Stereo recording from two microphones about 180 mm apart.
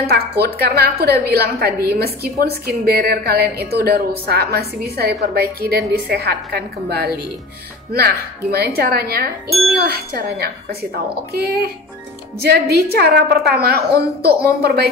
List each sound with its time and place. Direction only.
0.1 s a woman's voice: 60° right (ahead or behind)